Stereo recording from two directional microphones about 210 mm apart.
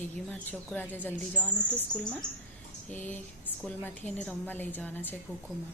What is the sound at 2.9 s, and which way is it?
A woman's voice, 10° left (ahead or behind).